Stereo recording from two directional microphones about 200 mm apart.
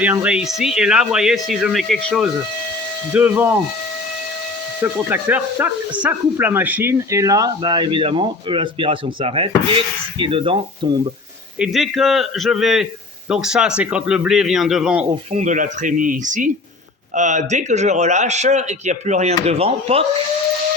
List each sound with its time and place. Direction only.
0.0 s a man's voice: 5° right (ahead or behind)
4.8 s speech: 10° right (ahead or behind)
11.6 s a man's voice: centre (ahead or behind)
15.3 s a man's voice: 35° right (ahead or behind)